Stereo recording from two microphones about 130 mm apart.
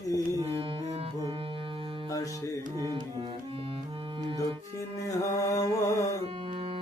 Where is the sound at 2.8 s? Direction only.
30° right (ahead or behind).